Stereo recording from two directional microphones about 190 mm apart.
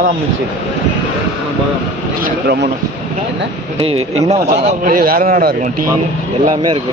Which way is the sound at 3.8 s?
30° right (ahead or behind).